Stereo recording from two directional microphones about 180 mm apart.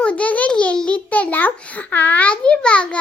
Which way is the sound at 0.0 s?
5° left (ahead or behind).